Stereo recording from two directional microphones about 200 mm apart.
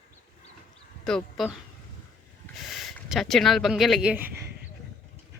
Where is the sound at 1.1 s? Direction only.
Centre (ahead or behind).